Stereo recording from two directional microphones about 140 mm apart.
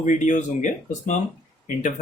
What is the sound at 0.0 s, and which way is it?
Speech, 65° left (ahead or behind).